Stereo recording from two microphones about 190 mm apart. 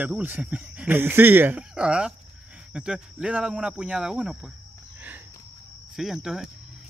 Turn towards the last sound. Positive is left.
turn(degrees=-5)  # may be behind; listen again after turning